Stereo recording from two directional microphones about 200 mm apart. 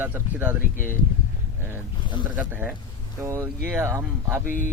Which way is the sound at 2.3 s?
10° right (ahead or behind).